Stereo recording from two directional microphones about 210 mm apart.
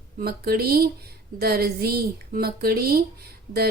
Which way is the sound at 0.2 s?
45° right (ahead or behind).